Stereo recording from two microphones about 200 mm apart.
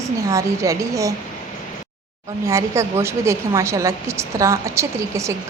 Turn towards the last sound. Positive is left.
turn(degrees=-15)  # may be behind; listen again after turning